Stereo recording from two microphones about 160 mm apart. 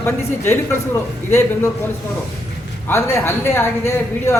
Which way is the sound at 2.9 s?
15° left (ahead or behind).